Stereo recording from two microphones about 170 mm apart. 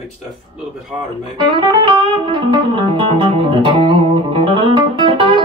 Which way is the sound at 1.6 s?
30° right (ahead or behind).